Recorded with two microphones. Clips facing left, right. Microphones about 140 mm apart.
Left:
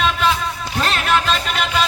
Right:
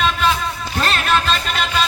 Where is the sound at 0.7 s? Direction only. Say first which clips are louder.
Even; 10° left (ahead or behind).